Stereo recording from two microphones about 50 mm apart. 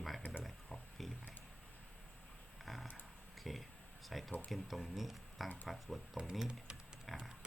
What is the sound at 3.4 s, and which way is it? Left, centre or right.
Speech, centre.